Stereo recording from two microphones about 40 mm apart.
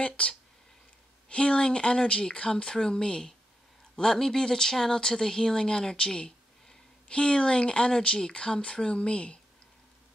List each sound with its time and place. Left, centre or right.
0.0 s speech: left